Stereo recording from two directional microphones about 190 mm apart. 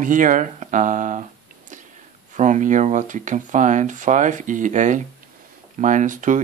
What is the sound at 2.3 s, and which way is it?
Speech, 40° right (ahead or behind).